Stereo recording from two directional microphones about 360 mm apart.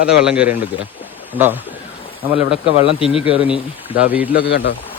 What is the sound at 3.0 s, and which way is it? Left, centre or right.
Speech, centre.